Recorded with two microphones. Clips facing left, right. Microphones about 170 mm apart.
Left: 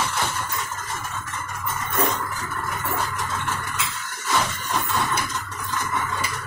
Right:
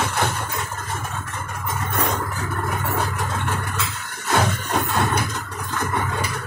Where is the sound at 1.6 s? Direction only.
55° right (ahead or behind).